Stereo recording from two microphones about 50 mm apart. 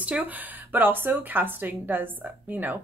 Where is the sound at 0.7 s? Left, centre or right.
Right.